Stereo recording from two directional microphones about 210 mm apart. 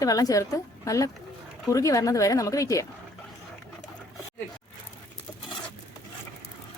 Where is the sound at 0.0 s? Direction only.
15° left (ahead or behind).